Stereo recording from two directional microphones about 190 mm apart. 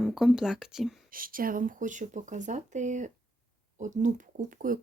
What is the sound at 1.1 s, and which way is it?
Speech, 50° right (ahead or behind).